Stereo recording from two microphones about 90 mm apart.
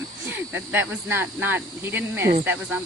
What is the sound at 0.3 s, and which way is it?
Speech, 20° right (ahead or behind).